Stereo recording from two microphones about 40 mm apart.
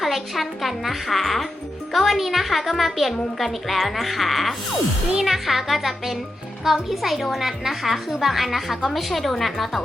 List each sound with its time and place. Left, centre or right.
0.0 s a woman's voice: centre